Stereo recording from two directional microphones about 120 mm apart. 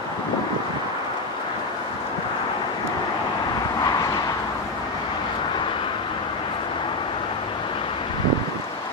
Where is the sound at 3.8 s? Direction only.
30° left (ahead or behind).